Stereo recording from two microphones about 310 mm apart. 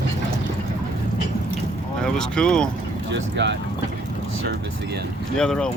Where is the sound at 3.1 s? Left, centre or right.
Right.